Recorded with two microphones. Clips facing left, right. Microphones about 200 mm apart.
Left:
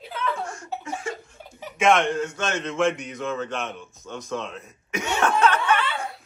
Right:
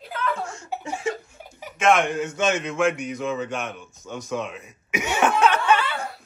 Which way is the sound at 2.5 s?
5° right (ahead or behind).